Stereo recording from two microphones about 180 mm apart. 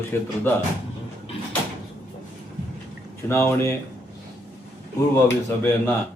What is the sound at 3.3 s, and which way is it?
Speech, 15° left (ahead or behind).